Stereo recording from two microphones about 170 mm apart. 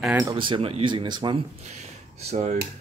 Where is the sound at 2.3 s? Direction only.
40° right (ahead or behind).